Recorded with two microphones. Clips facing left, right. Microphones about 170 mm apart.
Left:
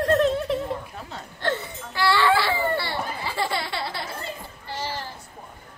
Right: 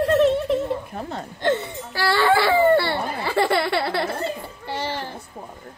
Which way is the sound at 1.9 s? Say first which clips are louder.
Right 1 dB; 40° right (ahead or behind).